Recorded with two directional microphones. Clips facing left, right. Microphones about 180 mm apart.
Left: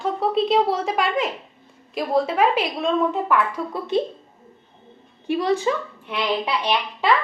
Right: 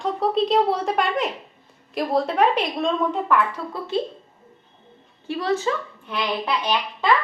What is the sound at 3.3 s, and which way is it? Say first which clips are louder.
Speech: even; 15° left (ahead or behind).